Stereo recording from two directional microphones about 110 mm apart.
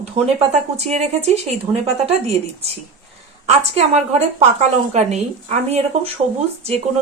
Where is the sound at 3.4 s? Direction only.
85° right.